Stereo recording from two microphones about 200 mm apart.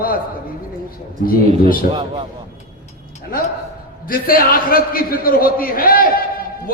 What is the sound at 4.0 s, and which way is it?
A man's voice, 45° left (ahead or behind).